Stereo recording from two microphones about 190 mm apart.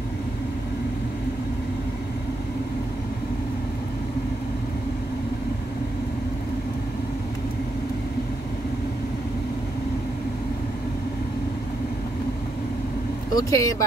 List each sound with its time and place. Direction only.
13.3 s speech: 20° left (ahead or behind)